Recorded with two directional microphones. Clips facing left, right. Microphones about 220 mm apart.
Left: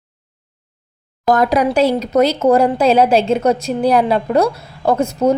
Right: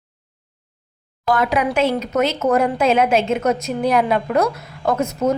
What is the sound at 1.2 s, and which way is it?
A woman's voice, 40° left (ahead or behind).